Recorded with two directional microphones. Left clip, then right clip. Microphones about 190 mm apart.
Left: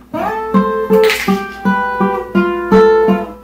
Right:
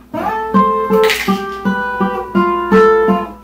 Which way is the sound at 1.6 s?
20° left (ahead or behind).